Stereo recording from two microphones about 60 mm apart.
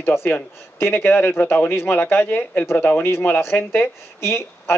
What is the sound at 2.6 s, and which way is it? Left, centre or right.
Speech, left.